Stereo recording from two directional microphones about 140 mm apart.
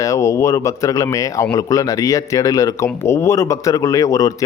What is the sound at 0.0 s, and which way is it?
A man's voice, 25° left (ahead or behind).